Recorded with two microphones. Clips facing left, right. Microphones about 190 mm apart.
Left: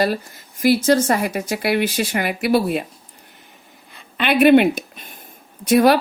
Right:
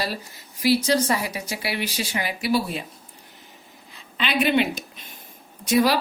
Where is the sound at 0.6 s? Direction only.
50° left (ahead or behind).